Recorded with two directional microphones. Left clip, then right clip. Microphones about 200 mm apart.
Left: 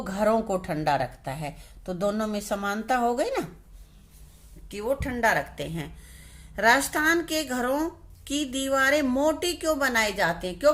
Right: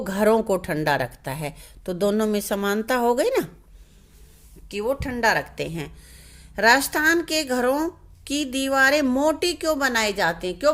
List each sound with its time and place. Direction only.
0.0 s speech: 45° right (ahead or behind)
4.7 s a woman's voice: 35° right (ahead or behind)